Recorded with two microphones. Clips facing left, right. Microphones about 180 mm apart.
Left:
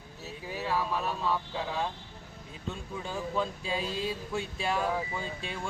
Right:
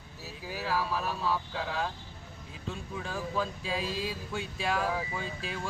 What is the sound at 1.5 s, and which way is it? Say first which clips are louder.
Music: left 1 dB; 20° left (ahead or behind).